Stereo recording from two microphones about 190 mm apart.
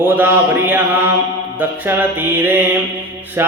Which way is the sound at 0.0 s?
10° right (ahead or behind).